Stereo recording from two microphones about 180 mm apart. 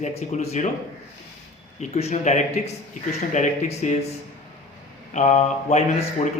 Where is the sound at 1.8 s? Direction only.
40° left (ahead or behind).